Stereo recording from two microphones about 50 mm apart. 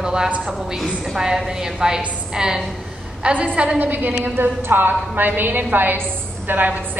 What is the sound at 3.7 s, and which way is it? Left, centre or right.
A woman's voice, right.